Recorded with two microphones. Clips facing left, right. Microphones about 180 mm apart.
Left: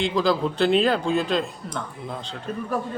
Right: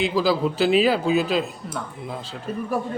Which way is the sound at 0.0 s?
5° right (ahead or behind).